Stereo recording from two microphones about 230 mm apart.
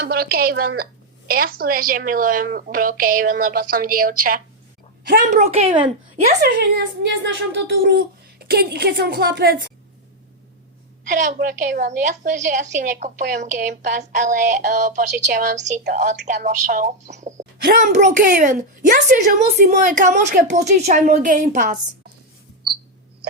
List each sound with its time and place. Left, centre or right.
0.0 s a woman's voice: right
6.4 s speech: right
11.1 s a woman's voice: right